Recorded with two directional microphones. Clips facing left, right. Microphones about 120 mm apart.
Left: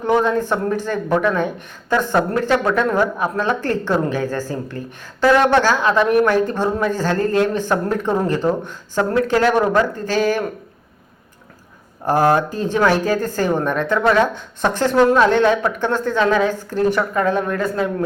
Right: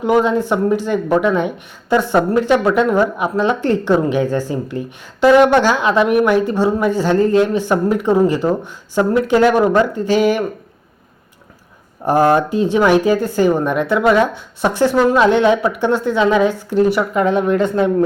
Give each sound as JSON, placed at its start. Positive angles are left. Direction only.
{"t": 0.0, "sound": "speech", "side_deg": -15}
{"t": 12.0, "sound": "speech", "side_deg": -15}